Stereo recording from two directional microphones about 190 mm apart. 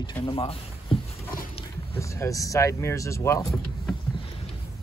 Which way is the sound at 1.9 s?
15° left (ahead or behind).